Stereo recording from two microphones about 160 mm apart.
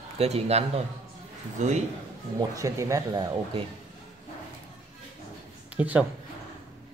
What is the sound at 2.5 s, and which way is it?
Speech, 20° right (ahead or behind).